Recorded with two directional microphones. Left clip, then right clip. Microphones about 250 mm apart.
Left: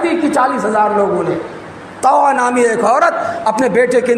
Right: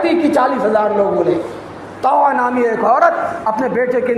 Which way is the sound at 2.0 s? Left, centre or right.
Left.